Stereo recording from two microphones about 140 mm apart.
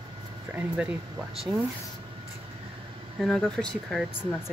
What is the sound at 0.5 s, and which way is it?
Speech, 10° right (ahead or behind).